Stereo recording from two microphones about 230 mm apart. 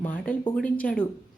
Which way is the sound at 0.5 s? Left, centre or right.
Centre.